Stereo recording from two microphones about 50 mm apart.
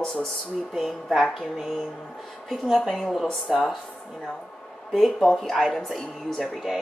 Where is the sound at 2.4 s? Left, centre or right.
Centre.